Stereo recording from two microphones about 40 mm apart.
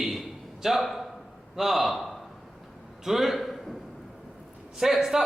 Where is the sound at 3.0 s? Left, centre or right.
Centre.